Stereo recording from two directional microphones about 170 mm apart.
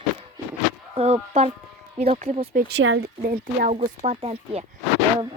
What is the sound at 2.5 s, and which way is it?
Speech, 90° right.